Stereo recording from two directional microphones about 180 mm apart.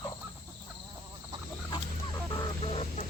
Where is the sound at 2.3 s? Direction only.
30° left (ahead or behind).